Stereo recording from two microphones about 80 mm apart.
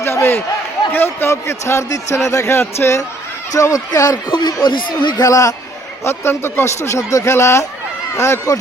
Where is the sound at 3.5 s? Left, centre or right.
Left.